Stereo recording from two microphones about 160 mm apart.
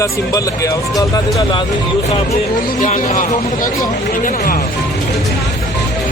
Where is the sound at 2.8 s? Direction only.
55° left (ahead or behind).